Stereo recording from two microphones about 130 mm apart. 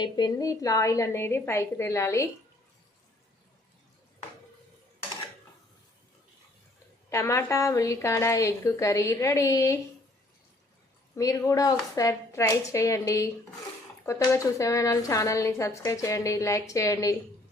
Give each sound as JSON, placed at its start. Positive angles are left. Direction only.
{"t": 0.0, "sound": "a woman's voice", "side_deg": 35}
{"t": 7.1, "sound": "a woman's voice", "side_deg": 25}
{"t": 11.1, "sound": "a woman's voice", "side_deg": 25}